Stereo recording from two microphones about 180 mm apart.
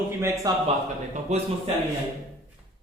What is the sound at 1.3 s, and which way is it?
Speech, 35° right (ahead or behind).